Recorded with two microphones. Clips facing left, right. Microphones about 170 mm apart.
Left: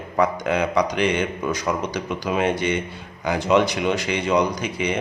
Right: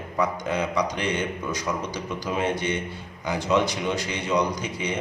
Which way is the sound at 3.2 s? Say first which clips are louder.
Left 4 dB; 80° left.